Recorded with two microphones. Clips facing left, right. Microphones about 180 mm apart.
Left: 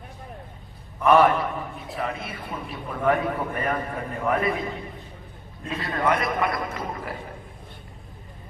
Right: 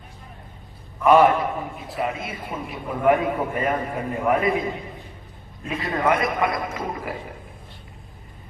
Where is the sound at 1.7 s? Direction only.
15° right (ahead or behind).